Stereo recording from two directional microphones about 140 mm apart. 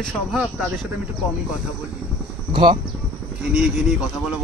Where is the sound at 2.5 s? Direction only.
35° right (ahead or behind).